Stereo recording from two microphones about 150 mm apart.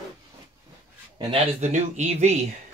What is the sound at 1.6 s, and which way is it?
Speech, 50° right (ahead or behind).